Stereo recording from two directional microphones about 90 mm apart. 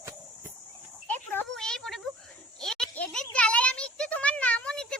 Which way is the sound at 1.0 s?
20° left (ahead or behind).